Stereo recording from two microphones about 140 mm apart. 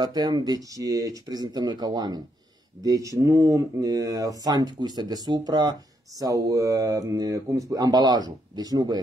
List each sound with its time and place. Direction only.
0.0 s speech: 30° right (ahead or behind)